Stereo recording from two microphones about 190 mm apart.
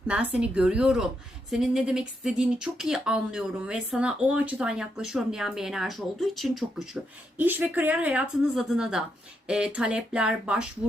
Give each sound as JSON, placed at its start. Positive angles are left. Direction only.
{"t": 0.3, "sound": "speech", "side_deg": -5}